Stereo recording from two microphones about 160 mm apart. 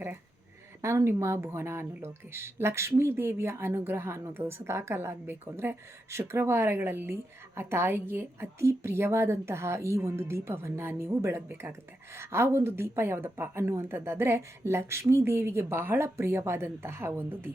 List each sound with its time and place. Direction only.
0.8 s speech: 15° right (ahead or behind)